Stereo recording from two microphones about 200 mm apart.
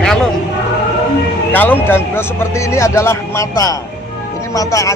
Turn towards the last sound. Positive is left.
turn(degrees=15)  # may be behind; listen again after turning